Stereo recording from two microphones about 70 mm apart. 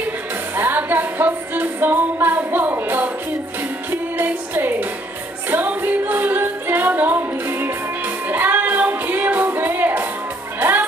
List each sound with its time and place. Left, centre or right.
0.6 s music: right
4.2 s music: right